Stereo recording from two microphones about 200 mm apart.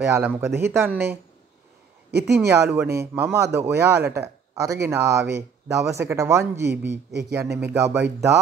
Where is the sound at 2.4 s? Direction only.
10° right (ahead or behind).